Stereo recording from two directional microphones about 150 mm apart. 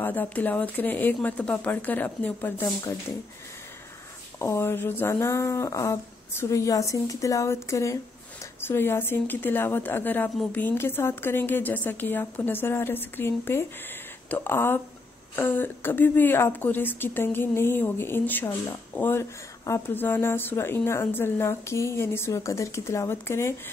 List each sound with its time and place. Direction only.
0.0 s a woman's voice: 10° left (ahead or behind)
4.4 s a woman's voice: 15° left (ahead or behind)